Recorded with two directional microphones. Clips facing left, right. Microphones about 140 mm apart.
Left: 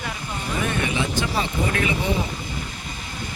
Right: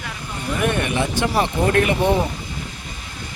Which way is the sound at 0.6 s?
60° right (ahead or behind).